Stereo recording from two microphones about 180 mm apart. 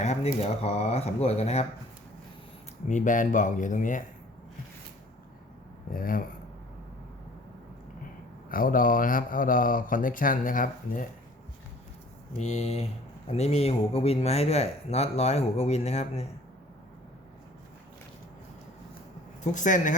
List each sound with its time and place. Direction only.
0.0 s speech: 40° left (ahead or behind)
2.9 s speech: 45° left (ahead or behind)
5.9 s speech: 50° left (ahead or behind)
8.4 s speech: 50° left (ahead or behind)
12.4 s speech: 40° left (ahead or behind)
19.4 s speech: 45° left (ahead or behind)